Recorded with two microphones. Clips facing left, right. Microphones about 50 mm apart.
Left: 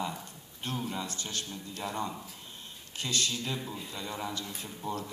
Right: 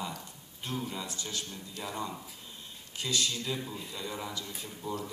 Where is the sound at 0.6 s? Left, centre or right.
Left.